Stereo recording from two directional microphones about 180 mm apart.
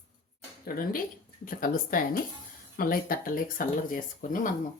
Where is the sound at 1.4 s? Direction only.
50° left (ahead or behind).